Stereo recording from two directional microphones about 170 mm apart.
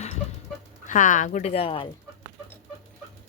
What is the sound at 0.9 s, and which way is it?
Speech, 50° left (ahead or behind).